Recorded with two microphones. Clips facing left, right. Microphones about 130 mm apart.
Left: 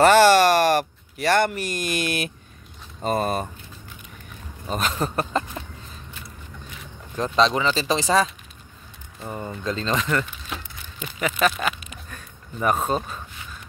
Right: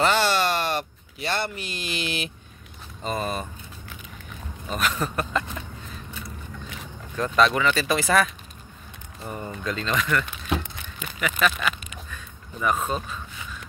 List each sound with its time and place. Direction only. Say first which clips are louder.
0.0 s speech: left 8 dB; 60° left (ahead or behind)
4.6 s speech: left 1 dB; 30° left (ahead or behind)
7.3 s speech: even; 25° left (ahead or behind)
9.3 s speech: left 2 dB; 25° left (ahead or behind)
10.6 s a sound: even; 55° right (ahead or behind)
11.1 s speech: left 2 dB; 35° left (ahead or behind)
12.1 s a sound: even; 45° left (ahead or behind)